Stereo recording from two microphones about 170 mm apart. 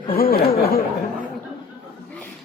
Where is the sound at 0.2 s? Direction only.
65° left (ahead or behind).